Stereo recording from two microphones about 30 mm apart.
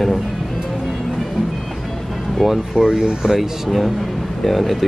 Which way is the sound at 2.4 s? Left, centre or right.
Centre.